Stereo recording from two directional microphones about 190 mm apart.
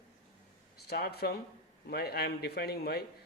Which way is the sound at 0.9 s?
55° left (ahead or behind).